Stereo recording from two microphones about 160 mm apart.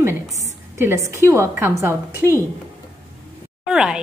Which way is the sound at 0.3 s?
45° right (ahead or behind).